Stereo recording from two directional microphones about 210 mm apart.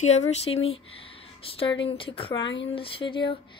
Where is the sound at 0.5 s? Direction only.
70° left (ahead or behind).